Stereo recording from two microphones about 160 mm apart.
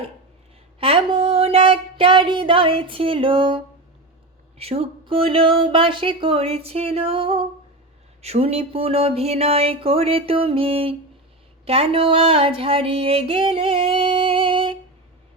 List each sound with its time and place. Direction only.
0.8 s a sound: 35° right (ahead or behind)
4.5 s speech: 40° right (ahead or behind)
11.6 s female singing: 40° right (ahead or behind)